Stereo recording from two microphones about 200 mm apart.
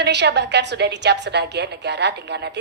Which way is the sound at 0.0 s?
60° right (ahead or behind).